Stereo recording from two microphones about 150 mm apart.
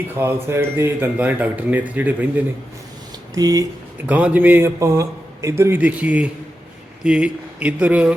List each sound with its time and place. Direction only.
0.1 s a man's voice: 15° right (ahead or behind)
3.3 s speech: 25° right (ahead or behind)
4.0 s a man's voice: 10° right (ahead or behind)